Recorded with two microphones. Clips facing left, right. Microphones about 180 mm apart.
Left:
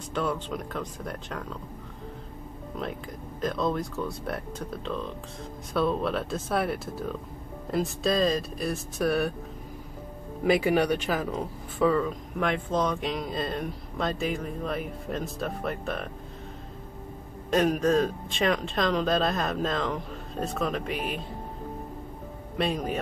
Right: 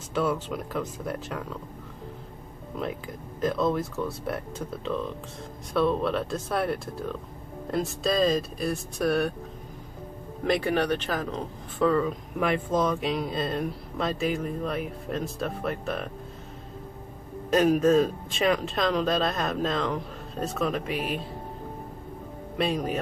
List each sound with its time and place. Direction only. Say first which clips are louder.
0.1 s speech: right 3 dB; 5° right (ahead or behind)
2.8 s speech: right 2 dB; 5° right (ahead or behind)
10.4 s speech: left 2 dB; 5° left (ahead or behind)
17.5 s speech: right 3 dB; centre (ahead or behind)
22.6 s speech: right 1 dB; centre (ahead or behind)